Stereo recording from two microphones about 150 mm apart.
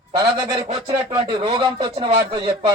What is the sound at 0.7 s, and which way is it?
Speech, 40° right (ahead or behind).